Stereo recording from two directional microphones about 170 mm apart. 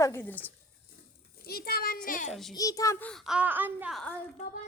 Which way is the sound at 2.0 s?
50° left (ahead or behind).